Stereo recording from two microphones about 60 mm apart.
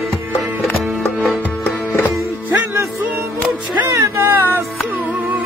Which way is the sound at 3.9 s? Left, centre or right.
Right.